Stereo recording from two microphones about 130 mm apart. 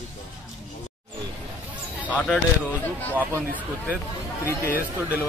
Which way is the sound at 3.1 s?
15° right (ahead or behind).